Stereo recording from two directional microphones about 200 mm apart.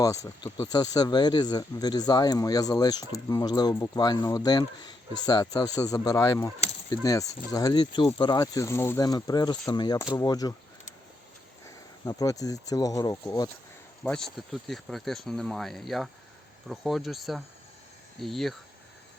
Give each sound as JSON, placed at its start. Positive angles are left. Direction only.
{"t": 0.0, "sound": "speech", "side_deg": 15}
{"t": 11.6, "sound": "speech", "side_deg": 15}
{"t": 14.0, "sound": "speech", "side_deg": 5}